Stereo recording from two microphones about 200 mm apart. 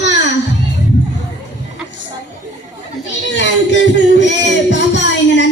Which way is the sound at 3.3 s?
65° left (ahead or behind).